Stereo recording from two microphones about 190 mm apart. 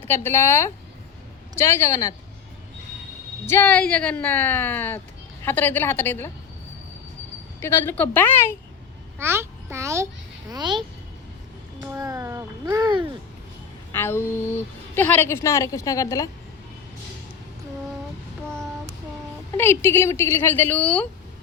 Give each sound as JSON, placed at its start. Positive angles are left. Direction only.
{"t": 0.1, "sound": "a woman's voice", "side_deg": 10}
{"t": 3.4, "sound": "a woman's voice", "side_deg": 10}
{"t": 7.6, "sound": "a woman's voice", "side_deg": 10}
{"t": 9.1, "sound": "a child's voice", "side_deg": -15}
{"t": 13.9, "sound": "a woman's voice", "side_deg": 10}
{"t": 19.5, "sound": "a woman's voice", "side_deg": 10}